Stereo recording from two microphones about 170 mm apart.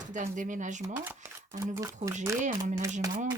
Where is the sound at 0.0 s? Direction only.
50° right (ahead or behind).